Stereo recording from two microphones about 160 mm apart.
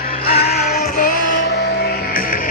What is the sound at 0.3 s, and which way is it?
Music, 80° left.